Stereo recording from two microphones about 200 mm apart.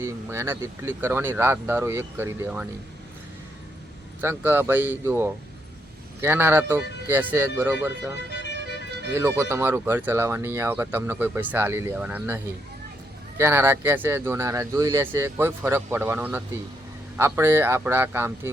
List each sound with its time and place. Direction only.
0.0 s speech: 15° right (ahead or behind)
4.2 s speech: 10° right (ahead or behind)
8.3 s music: 60° left (ahead or behind)
9.1 s speech: 15° right (ahead or behind)
13.4 s speech: 10° right (ahead or behind)